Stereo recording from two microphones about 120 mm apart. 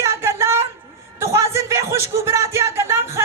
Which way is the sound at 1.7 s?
25° right (ahead or behind).